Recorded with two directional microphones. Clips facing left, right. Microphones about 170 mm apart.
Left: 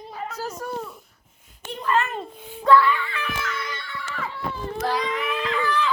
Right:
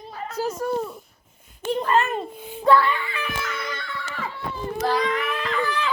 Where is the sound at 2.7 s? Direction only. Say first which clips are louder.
Left 1 dB; 25° right (ahead or behind).